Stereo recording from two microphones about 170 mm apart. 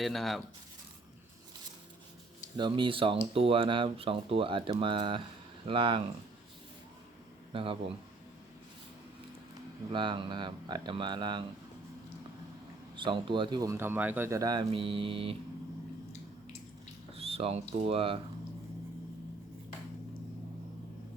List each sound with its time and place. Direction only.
0.0 s speech: centre (ahead or behind)
2.6 s speech: 30° right (ahead or behind)
7.5 s speech: 30° right (ahead or behind)
9.9 s speech: 30° right (ahead or behind)
13.0 s speech: 30° right (ahead or behind)
17.2 s speech: 35° right (ahead or behind)